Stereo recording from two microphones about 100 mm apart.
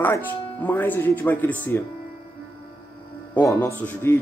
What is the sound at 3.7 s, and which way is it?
Speech, 15° left (ahead or behind).